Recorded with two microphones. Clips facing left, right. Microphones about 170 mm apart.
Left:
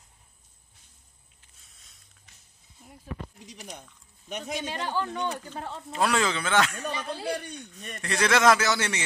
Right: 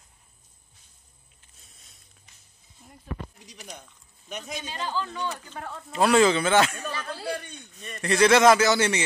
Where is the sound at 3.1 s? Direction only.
50° right (ahead or behind).